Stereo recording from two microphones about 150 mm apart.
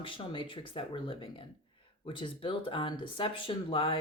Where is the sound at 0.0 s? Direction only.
35° left (ahead or behind).